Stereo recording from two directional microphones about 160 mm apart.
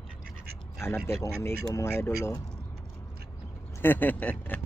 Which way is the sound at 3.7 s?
10° left (ahead or behind).